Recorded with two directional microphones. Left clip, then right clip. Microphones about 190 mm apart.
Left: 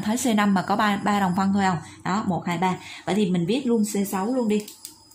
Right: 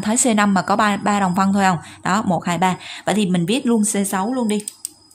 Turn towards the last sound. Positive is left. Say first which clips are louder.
# right 3 dB
turn(degrees=-45)  # may be behind; listen again after turning